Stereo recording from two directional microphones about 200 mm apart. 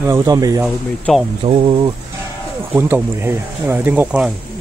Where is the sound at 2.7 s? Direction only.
10° right (ahead or behind).